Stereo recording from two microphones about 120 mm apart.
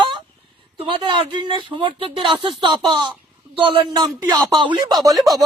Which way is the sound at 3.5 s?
50° right (ahead or behind).